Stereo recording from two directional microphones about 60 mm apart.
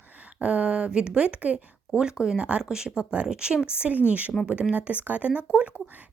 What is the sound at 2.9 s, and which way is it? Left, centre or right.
A woman's voice, right.